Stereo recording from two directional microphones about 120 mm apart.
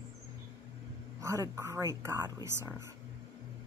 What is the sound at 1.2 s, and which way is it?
A woman's voice, 25° right (ahead or behind).